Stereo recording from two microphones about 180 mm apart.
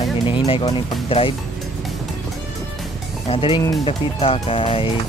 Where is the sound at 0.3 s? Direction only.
30° left (ahead or behind).